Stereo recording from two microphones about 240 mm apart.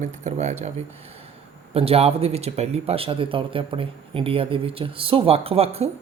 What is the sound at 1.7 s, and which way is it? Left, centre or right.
Speech, right.